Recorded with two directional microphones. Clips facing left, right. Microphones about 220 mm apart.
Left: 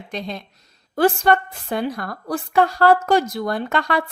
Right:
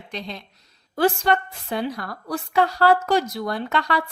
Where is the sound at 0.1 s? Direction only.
50° left (ahead or behind).